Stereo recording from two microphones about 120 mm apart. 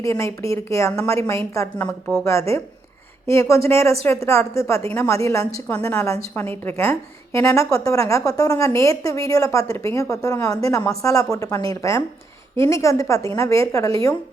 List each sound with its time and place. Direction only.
0.0 s a woman's voice: 25° left (ahead or behind)
1.8 s speech: 10° left (ahead or behind)
3.2 s a woman's voice: 25° left (ahead or behind)